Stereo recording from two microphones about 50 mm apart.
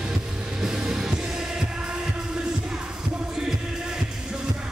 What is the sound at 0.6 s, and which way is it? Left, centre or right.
Music, centre.